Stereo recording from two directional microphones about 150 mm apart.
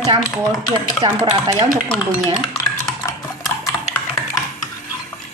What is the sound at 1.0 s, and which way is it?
Speech, 35° right (ahead or behind).